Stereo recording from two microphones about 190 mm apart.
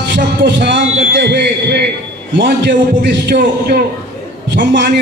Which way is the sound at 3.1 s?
60° right (ahead or behind).